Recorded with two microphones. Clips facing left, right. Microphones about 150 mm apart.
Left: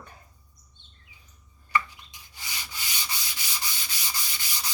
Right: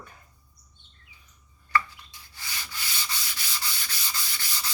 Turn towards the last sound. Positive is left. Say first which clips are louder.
# right 1 dB
turn(degrees=15)  # may be behind; listen again after turning